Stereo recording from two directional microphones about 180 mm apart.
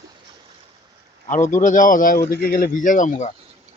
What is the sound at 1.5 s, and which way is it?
Speech, 45° left (ahead or behind).